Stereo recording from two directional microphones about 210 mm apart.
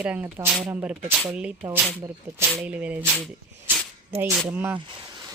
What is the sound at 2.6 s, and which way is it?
Speech, 5° right (ahead or behind).